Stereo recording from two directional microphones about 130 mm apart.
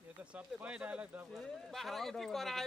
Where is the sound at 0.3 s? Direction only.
10° right (ahead or behind).